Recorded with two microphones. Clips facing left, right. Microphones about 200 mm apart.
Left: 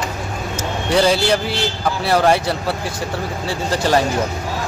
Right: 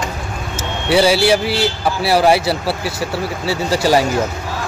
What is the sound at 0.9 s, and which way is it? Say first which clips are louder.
A man's voice: right 3 dB; 10° right (ahead or behind).